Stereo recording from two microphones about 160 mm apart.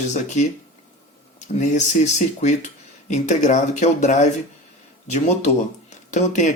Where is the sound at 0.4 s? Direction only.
45° left (ahead or behind).